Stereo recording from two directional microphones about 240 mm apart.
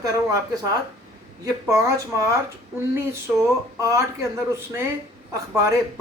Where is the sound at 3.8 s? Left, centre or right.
Centre.